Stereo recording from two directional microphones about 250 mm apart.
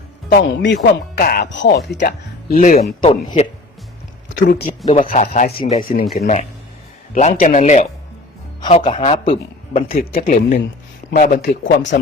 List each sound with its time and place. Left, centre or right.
0.3 s speech: left
3.0 s speech: left
4.3 s speech: left
5.0 s speech: left
7.1 s speech: left
9.9 s speech: left